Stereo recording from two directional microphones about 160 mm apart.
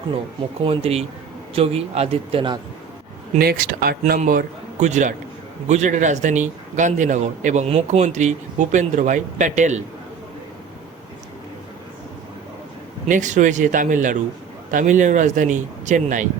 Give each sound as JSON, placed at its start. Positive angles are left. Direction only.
{"t": 0.6, "sound": "speech", "side_deg": -35}
{"t": 3.3, "sound": "speech", "side_deg": -65}
{"t": 4.0, "sound": "a man's voice", "side_deg": -55}
{"t": 13.1, "sound": "a man's voice", "side_deg": -50}